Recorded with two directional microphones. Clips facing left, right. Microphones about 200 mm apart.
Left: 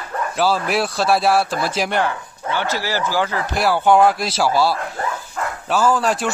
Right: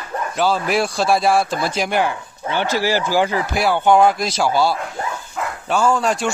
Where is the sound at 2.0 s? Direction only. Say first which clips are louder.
Even; 15° right (ahead or behind).